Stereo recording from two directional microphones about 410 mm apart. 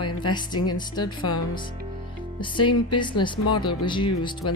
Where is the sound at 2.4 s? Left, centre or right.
Centre.